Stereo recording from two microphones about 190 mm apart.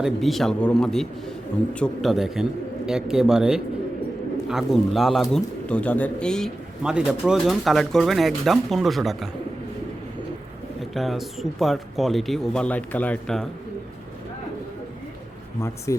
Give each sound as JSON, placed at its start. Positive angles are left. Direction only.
{"t": 0.0, "sound": "speech", "side_deg": 0}
{"t": 10.9, "sound": "speech", "side_deg": 0}
{"t": 15.9, "sound": "speech", "side_deg": 15}